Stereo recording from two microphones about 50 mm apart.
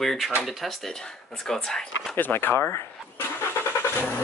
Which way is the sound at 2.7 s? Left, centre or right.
Left.